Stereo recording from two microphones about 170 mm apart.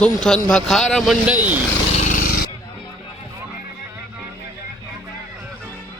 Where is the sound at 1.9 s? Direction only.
50° left (ahead or behind).